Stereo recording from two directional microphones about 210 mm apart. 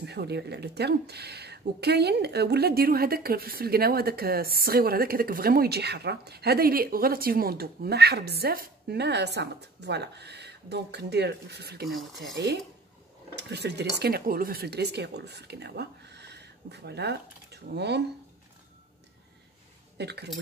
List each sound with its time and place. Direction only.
0.0 s speech: 50° right (ahead or behind)
20.0 s speech: 50° right (ahead or behind)